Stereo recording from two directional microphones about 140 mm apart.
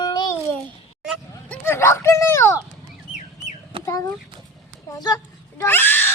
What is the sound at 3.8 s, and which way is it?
Child singing, 25° left (ahead or behind).